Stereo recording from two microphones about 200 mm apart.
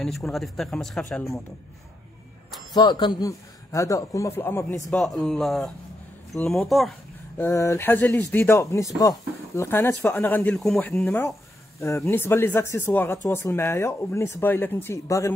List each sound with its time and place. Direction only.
0.0 s speech: centre (ahead or behind)
2.7 s speech: 20° left (ahead or behind)
4.9 s speech: 5° left (ahead or behind)
7.3 s speech: 15° left (ahead or behind)